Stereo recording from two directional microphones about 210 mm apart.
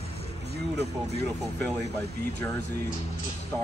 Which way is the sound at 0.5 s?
50° right (ahead or behind).